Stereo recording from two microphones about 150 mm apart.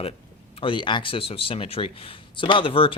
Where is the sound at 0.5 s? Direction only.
35° left (ahead or behind).